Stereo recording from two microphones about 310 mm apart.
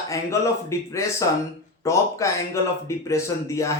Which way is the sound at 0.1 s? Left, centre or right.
Centre.